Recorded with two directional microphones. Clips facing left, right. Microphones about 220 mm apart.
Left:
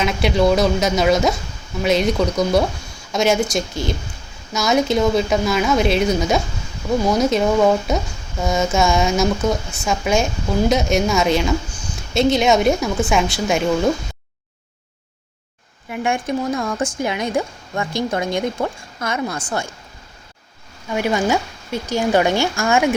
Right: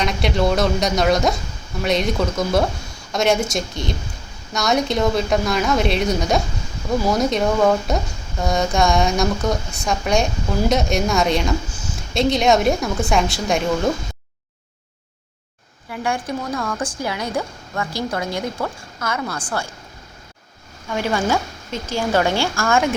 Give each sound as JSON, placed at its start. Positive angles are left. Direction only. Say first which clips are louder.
{"t": 0.0, "sound": "a woman's voice", "louder": "left 3 dB", "side_deg": 0}
{"t": 15.9, "sound": "a woman's voice", "louder": "left 3 dB", "side_deg": 20}
{"t": 20.8, "sound": "speech", "louder": "left 2 dB", "side_deg": 15}